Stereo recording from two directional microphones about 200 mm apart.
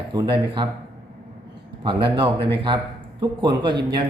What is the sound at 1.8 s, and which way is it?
A man's voice, 25° right (ahead or behind).